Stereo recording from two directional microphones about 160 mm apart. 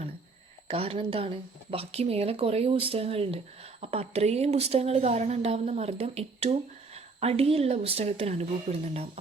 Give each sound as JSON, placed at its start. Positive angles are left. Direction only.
{"t": 0.7, "sound": "speech", "side_deg": -35}